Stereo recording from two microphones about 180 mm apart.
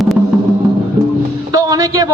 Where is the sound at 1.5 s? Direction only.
20° right (ahead or behind).